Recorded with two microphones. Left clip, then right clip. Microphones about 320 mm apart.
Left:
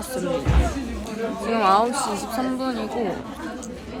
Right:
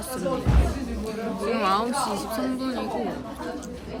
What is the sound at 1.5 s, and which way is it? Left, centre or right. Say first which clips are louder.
Speech: left 6 dB; centre.